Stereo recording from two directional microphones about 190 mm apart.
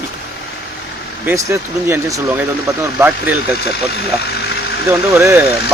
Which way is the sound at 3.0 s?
10° right (ahead or behind).